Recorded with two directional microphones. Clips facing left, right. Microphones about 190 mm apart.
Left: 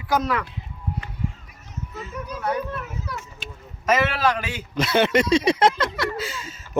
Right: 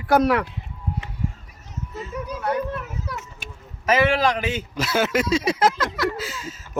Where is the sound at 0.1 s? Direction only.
65° right (ahead or behind).